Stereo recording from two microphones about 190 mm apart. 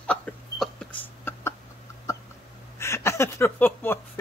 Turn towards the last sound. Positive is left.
turn(degrees=10)  # may be behind; listen again after turning